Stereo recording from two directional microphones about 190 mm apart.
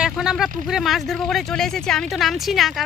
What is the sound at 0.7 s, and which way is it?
Speech, centre (ahead or behind).